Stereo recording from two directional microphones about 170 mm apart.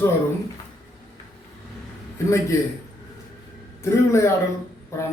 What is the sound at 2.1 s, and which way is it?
Speech, 15° left (ahead or behind).